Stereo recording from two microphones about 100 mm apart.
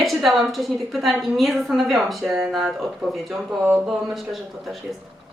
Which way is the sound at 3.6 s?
20° right (ahead or behind).